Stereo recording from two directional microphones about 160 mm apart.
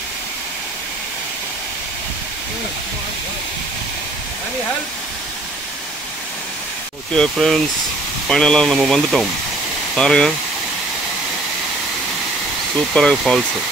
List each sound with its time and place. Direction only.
7.2 s speech: centre (ahead or behind)
12.9 s speech: 5° left (ahead or behind)